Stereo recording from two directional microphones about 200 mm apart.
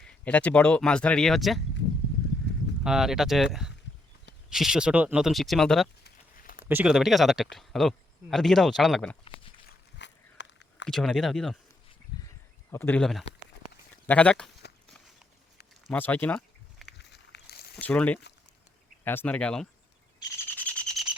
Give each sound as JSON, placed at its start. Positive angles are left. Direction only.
{"t": 0.0, "sound": "speech", "side_deg": 5}
{"t": 2.8, "sound": "speech", "side_deg": -5}
{"t": 6.4, "sound": "a sound", "side_deg": 45}
{"t": 6.7, "sound": "speech", "side_deg": -5}
{"t": 9.6, "sound": "a sound", "side_deg": 60}
{"t": 10.8, "sound": "speech", "side_deg": 0}
{"t": 12.7, "sound": "speech", "side_deg": 10}
{"t": 14.8, "sound": "walk", "side_deg": 0}
{"t": 15.9, "sound": "a sound", "side_deg": 10}
{"t": 17.0, "sound": "walk", "side_deg": 55}
{"t": 17.7, "sound": "speech", "side_deg": 5}
{"t": 20.4, "sound": "bird", "side_deg": 10}